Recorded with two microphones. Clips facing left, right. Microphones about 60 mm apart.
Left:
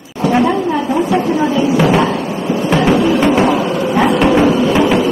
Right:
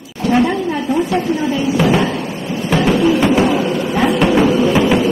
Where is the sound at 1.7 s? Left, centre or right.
Centre.